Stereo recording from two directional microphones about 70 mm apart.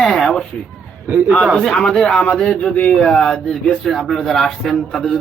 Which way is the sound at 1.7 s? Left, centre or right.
Centre.